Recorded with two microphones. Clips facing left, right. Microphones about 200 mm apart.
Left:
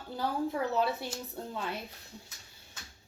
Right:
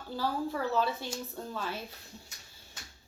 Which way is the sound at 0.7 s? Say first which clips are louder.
Even; 60° left (ahead or behind).